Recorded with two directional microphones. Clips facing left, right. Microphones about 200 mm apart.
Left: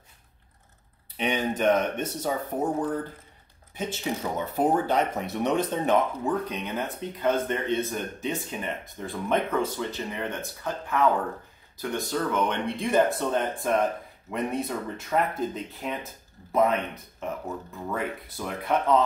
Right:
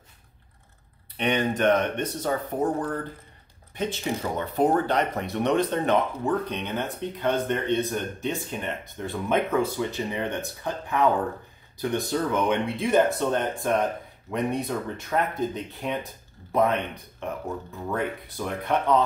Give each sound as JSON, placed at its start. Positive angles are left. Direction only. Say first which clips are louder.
{"t": 1.1, "sound": "speech", "louder": "right 2 dB", "side_deg": 5}
{"t": 12.6, "sound": "speech", "louder": "right 2 dB", "side_deg": 0}